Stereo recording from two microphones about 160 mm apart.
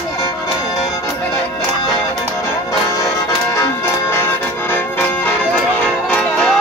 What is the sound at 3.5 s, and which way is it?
Music, 15° left (ahead or behind).